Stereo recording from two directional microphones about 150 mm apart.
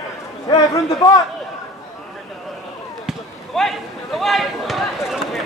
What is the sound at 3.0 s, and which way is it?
Basketball bounce, centre (ahead or behind).